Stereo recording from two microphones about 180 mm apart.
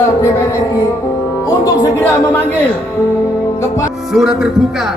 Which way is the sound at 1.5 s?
20° left (ahead or behind).